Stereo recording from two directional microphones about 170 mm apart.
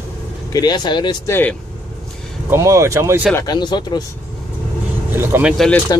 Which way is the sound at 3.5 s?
25° left (ahead or behind).